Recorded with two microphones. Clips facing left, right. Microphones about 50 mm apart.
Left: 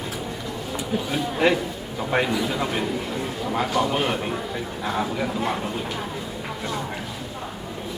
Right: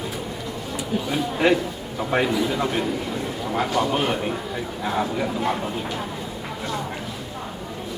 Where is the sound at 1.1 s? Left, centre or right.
Centre.